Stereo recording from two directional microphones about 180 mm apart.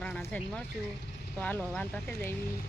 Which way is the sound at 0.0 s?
5° left (ahead or behind).